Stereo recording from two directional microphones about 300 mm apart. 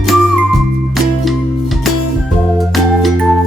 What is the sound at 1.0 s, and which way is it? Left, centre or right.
Music, centre.